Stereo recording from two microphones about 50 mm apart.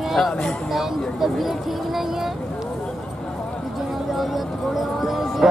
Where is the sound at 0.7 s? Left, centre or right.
Centre.